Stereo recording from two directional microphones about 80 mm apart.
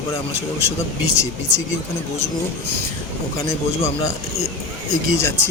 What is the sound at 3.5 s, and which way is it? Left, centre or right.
Speech, left.